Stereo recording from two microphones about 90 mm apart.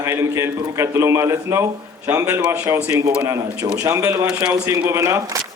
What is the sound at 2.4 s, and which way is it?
Speech, 15° right (ahead or behind).